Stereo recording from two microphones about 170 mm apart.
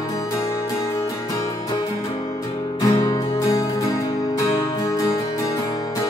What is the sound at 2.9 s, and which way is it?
Music, 35° left (ahead or behind).